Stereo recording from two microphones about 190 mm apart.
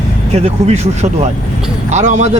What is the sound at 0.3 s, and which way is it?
Speech, 35° right (ahead or behind).